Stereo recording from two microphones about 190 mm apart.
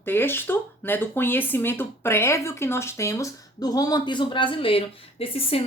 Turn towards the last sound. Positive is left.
turn(degrees=30)  # may be behind; listen again after turning